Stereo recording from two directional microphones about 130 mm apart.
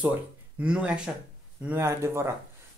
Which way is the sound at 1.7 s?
20° right (ahead or behind).